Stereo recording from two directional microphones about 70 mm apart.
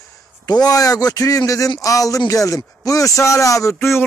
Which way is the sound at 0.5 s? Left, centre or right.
Left.